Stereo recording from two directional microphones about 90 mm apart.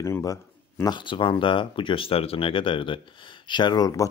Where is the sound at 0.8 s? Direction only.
60° left (ahead or behind); by 4.0 s 45° left (ahead or behind).